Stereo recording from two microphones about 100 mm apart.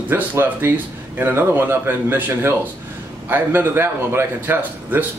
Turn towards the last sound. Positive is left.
turn(degrees=-20)  # may be behind; listen again after turning